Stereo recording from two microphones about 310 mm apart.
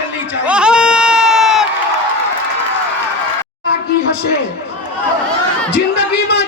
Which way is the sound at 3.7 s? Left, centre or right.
Left.